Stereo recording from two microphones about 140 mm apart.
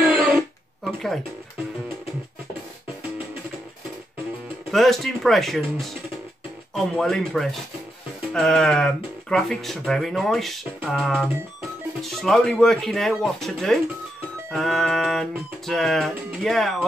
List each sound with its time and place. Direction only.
0.0 s guitar: 15° right (ahead or behind)
0.8 s speech: centre (ahead or behind)
4.6 s speech: centre (ahead or behind)